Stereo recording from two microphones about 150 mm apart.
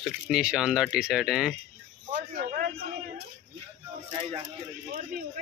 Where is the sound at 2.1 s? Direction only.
70° right (ahead or behind).